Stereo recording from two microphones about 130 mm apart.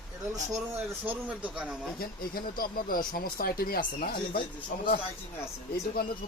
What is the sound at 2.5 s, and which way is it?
Speech, 90° left.